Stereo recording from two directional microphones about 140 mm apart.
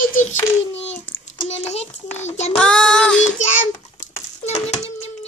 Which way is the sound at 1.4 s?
50° left (ahead or behind).